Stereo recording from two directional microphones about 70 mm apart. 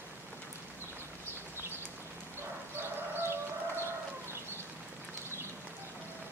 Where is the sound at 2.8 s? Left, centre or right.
Right.